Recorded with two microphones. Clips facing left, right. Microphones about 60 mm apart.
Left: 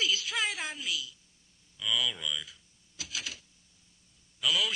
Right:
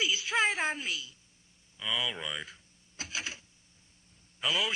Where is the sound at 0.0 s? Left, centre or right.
Right.